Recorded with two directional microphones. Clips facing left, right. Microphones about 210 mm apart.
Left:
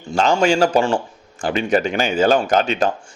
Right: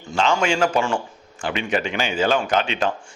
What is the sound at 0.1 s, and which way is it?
A man's voice, 40° left (ahead or behind).